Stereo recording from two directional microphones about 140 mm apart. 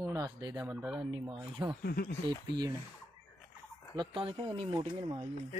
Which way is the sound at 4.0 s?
35° right (ahead or behind).